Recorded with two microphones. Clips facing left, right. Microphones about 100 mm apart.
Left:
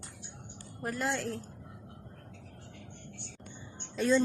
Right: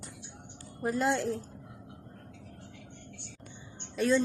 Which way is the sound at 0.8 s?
20° right (ahead or behind).